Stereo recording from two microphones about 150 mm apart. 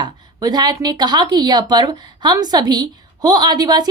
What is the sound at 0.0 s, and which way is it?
A woman's voice, 25° right (ahead or behind).